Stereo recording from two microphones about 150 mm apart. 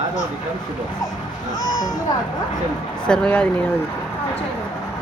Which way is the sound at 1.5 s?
25° left (ahead or behind).